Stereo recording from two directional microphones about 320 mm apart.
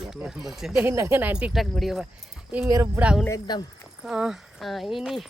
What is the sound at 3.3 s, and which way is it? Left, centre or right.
Speech, centre.